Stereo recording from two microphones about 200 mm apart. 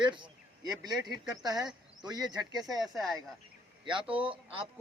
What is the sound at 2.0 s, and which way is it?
Speech, 20° right (ahead or behind).